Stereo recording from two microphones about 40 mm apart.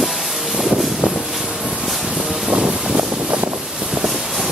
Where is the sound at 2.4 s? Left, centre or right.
Right.